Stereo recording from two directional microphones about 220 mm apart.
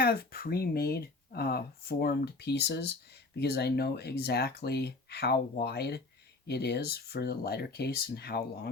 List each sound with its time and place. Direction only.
0.0 s speech: 45° left (ahead or behind)